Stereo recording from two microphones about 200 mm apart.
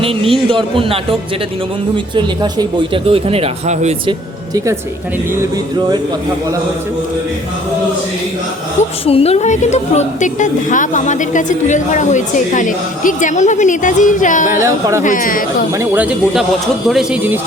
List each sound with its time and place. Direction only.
0.0 s speech: 25° right (ahead or behind)
2.1 s speech: 25° right (ahead or behind)
4.5 s speech: 15° right (ahead or behind)
8.8 s a woman's voice: 30° left (ahead or behind)
14.5 s speech: 15° right (ahead or behind)
15.0 s speech: 40° left (ahead or behind)
15.8 s speech: 10° right (ahead or behind)